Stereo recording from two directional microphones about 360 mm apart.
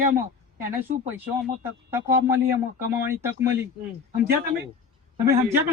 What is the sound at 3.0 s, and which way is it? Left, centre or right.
Speech, centre.